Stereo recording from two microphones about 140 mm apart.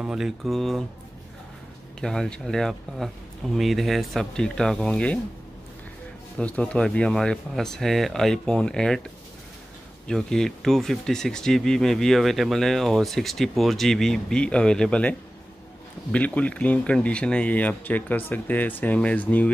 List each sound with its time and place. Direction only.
0.0 s speech: 5° right (ahead or behind)
2.0 s speech: 5° left (ahead or behind)
6.3 s speech: 5° left (ahead or behind)
10.0 s speech: 5° left (ahead or behind)